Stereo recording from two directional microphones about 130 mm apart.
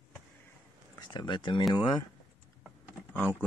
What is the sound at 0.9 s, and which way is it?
Speech, 35° left (ahead or behind).